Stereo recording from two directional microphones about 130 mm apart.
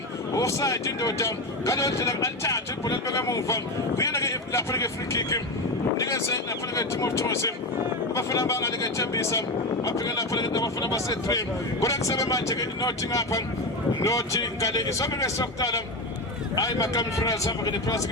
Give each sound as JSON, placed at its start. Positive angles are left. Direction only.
{"t": 0.3, "sound": "speech", "side_deg": 25}